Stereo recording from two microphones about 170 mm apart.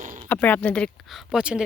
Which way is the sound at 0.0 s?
50° right (ahead or behind).